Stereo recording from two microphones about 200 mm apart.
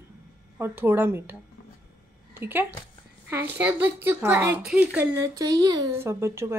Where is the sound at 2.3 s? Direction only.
10° right (ahead or behind).